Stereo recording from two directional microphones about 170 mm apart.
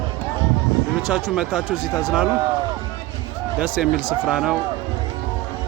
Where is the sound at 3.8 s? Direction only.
5° right (ahead or behind).